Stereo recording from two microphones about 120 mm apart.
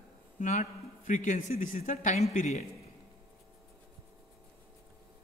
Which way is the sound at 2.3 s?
75° left (ahead or behind).